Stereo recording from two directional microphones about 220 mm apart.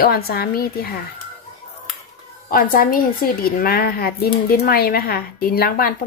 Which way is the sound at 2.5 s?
40° left (ahead or behind).